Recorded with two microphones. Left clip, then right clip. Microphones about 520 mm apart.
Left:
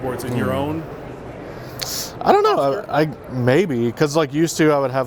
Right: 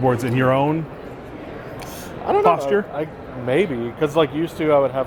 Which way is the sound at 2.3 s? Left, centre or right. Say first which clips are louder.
Left 1 dB; left.